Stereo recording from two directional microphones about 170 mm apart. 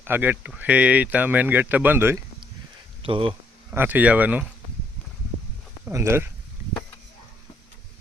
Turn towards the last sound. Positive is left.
turn(degrees=-15)  # may be behind; listen again after turning